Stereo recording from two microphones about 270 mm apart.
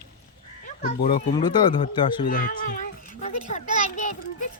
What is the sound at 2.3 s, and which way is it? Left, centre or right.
A child's voice, left.